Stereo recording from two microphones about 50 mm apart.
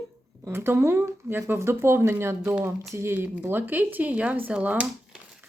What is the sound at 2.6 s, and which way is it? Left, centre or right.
Speech, right.